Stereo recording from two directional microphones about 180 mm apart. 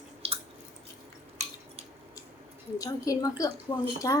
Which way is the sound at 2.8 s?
20° left (ahead or behind).